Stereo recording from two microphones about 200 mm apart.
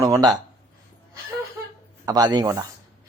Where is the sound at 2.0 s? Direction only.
20° right (ahead or behind).